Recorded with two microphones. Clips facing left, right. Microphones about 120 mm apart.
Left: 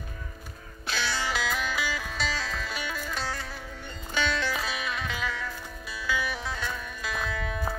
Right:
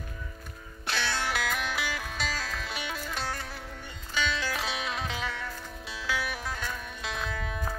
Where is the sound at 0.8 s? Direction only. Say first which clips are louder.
Even; 60° right (ahead or behind).